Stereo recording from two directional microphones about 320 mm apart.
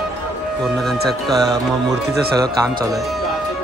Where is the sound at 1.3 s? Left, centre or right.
Centre.